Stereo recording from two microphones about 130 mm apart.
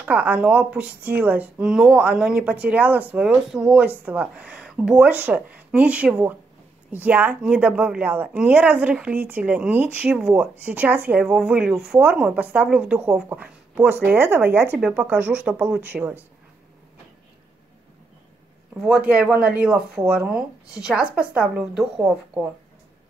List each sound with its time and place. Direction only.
0.0 s speech: 10° right (ahead or behind)
18.9 s speech: 10° right (ahead or behind)